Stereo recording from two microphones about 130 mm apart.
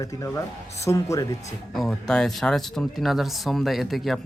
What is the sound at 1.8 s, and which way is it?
Speech, 5° left (ahead or behind).